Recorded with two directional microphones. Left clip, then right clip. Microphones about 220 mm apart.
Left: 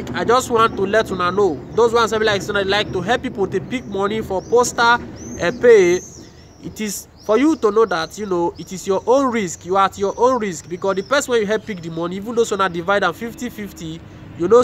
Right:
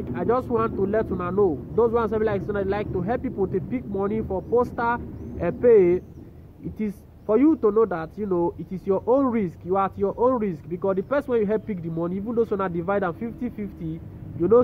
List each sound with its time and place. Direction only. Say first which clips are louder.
0.0 s speech: left 7 dB; 5° left (ahead or behind)
8.7 s speech: left 5 dB; 5° left (ahead or behind)